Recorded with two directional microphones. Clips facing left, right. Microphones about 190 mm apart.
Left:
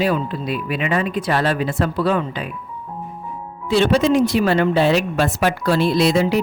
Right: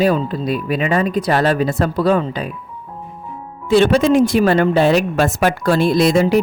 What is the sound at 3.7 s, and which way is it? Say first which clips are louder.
Speech: right 3 dB; 50° right (ahead or behind).